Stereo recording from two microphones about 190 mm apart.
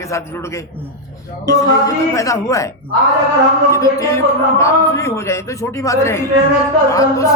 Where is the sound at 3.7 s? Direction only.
15° left (ahead or behind).